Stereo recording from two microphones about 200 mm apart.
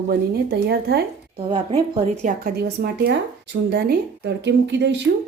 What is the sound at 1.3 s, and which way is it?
Speech, 30° right (ahead or behind).